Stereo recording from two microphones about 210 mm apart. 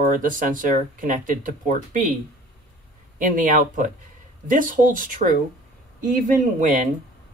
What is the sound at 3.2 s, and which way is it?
Speech, 40° right (ahead or behind).